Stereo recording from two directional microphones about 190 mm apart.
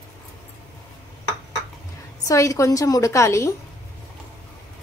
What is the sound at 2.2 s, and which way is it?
A woman's voice, 15° left (ahead or behind).